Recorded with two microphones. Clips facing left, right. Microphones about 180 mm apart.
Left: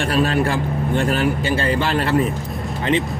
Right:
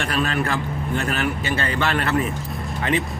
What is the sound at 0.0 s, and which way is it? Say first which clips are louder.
A man's voice: left 5 dB; 30° left (ahead or behind).